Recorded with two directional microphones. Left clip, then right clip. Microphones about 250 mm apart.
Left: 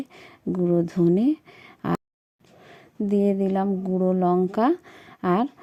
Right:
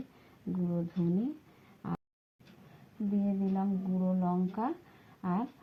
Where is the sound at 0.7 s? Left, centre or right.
Left.